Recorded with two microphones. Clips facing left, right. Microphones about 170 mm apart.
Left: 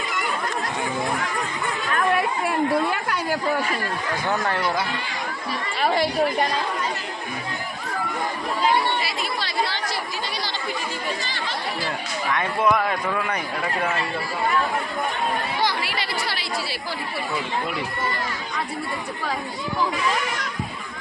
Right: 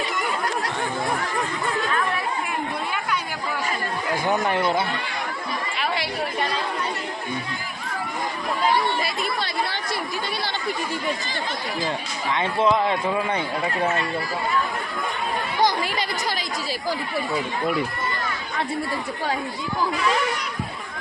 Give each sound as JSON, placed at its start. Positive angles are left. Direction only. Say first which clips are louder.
{"t": 4.1, "sound": "a man's voice", "louder": "right 3 dB", "side_deg": -20}
{"t": 5.8, "sound": "speech", "louder": "left 7 dB", "side_deg": 50}
{"t": 9.0, "sound": "chatter", "louder": "right 1 dB", "side_deg": -55}
{"t": 12.3, "sound": "a man's voice", "louder": "right 1 dB", "side_deg": -25}
{"t": 15.6, "sound": "chatter", "louder": "right 3 dB", "side_deg": -45}